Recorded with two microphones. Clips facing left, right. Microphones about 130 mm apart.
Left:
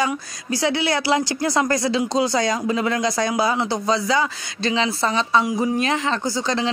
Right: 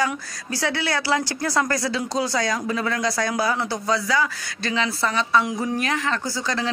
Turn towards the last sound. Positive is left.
turn(degrees=20)  # may be behind; listen again after turning